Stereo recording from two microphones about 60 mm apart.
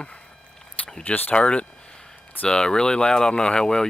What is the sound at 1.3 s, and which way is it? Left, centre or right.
Speech, centre.